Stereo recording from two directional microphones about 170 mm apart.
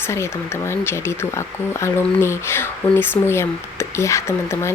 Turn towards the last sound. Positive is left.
turn(degrees=15)  # may be behind; listen again after turning